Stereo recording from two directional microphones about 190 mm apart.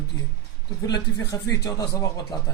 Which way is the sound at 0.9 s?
20° left (ahead or behind).